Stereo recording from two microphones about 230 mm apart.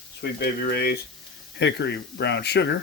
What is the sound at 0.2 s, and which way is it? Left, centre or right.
Speech, left.